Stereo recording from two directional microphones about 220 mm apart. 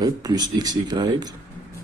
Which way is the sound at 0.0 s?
15° right (ahead or behind).